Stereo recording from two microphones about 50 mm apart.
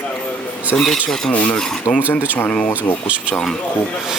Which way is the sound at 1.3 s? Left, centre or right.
Left.